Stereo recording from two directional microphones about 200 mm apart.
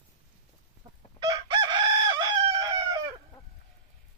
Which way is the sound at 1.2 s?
20° right (ahead or behind).